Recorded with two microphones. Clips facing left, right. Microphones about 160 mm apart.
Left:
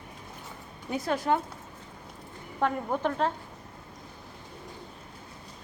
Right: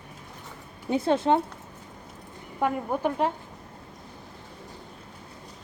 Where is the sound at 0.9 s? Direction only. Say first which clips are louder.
Right 5 dB; 25° right (ahead or behind).